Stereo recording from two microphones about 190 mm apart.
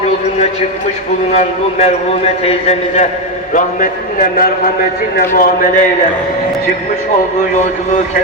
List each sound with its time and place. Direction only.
1.3 s a man's voice: 35° left (ahead or behind)